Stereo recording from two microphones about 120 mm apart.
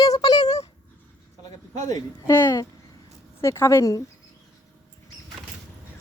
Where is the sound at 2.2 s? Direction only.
20° left (ahead or behind).